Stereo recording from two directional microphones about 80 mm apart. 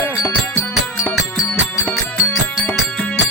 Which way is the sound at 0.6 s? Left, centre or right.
Left.